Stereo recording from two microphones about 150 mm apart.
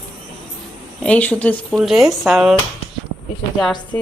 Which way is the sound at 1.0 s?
10° left (ahead or behind).